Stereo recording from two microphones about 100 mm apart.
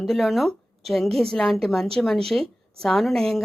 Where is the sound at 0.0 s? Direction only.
Centre (ahead or behind).